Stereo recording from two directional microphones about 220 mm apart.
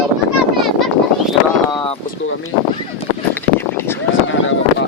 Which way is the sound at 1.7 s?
20° left (ahead or behind).